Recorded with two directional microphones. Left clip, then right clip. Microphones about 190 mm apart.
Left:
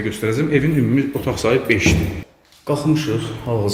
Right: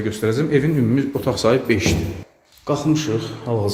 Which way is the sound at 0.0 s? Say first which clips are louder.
Even; 15° right (ahead or behind).